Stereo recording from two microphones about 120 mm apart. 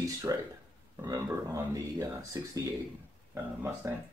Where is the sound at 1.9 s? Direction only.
30° right (ahead or behind).